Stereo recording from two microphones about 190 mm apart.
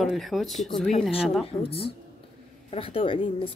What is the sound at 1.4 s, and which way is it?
A woman's voice, 30° left (ahead or behind).